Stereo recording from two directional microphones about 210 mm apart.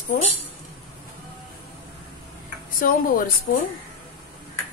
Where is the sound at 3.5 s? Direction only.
45° left (ahead or behind).